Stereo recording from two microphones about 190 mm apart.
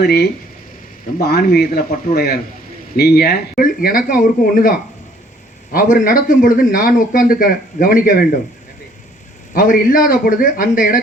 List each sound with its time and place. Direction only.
0.0 s speech: 55° left (ahead or behind)
5.7 s speech: 45° left (ahead or behind)
9.6 s speech: 45° left (ahead or behind)